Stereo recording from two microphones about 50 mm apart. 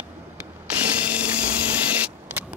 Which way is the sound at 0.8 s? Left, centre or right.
Right.